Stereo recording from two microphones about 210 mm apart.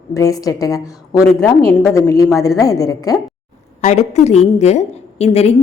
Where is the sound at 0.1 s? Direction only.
15° left (ahead or behind).